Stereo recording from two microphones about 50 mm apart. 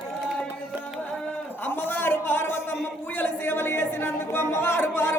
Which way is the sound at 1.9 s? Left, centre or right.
Left.